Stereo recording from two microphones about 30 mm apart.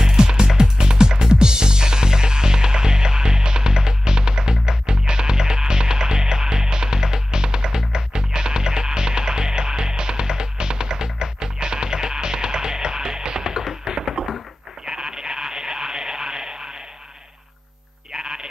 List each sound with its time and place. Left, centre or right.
0.0 s music: right
14.9 s a sound: right
18.1 s sheep: right